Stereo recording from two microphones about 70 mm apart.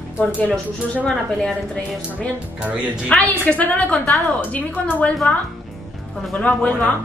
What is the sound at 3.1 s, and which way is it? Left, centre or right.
A woman's voice, centre.